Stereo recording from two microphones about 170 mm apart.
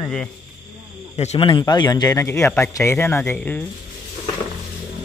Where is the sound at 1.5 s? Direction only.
25° left (ahead or behind); by 3.6 s 10° left (ahead or behind).